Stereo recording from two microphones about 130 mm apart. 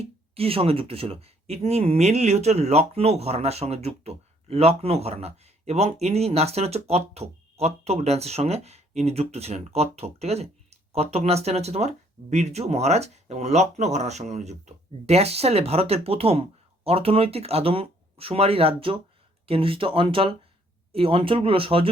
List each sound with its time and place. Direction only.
0.0 s speech: 50° right (ahead or behind)